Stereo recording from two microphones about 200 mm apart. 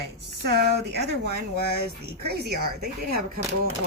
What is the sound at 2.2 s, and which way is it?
Speech, 50° right (ahead or behind).